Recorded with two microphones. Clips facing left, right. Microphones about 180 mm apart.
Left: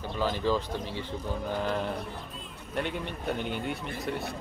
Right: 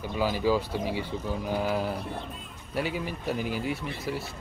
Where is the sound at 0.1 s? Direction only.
10° right (ahead or behind).